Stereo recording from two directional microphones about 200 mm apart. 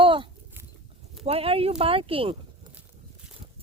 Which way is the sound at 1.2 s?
30° right (ahead or behind).